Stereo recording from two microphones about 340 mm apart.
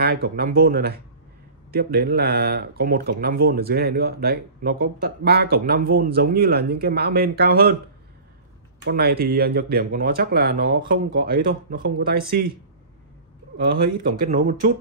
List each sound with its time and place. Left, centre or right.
0.0 s speech: right
8.8 s speech: right
13.7 s speech: right